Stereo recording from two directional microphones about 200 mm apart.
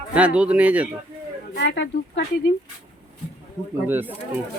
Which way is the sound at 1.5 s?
60° left (ahead or behind).